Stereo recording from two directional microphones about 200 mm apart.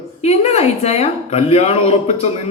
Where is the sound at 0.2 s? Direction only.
30° left (ahead or behind).